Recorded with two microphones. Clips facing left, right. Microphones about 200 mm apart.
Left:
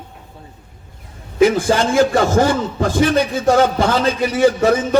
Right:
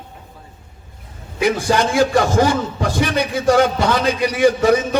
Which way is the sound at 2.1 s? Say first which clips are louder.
Left 1 dB; 55° left (ahead or behind).